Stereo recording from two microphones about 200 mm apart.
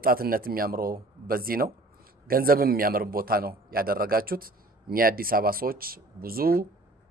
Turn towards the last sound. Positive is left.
turn(degrees=-45)  # may be behind; listen again after turning